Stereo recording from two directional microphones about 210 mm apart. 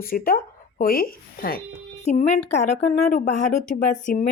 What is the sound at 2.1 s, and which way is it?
Speech, 30° left (ahead or behind).